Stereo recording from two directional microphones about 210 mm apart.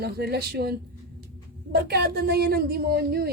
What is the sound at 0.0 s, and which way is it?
A woman's voice, 50° right (ahead or behind).